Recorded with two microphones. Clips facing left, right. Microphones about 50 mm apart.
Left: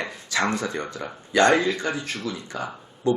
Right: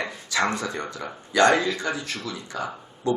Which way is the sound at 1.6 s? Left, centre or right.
Left.